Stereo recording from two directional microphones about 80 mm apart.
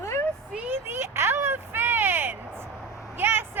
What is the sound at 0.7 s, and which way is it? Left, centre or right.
Speech, right.